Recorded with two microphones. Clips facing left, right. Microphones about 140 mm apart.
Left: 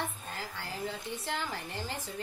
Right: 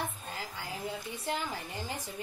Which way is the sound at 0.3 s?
15° right (ahead or behind).